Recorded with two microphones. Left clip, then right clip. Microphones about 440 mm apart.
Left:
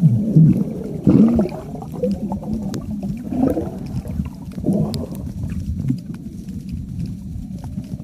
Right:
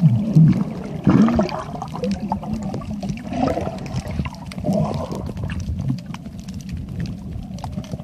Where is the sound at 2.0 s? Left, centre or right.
Centre.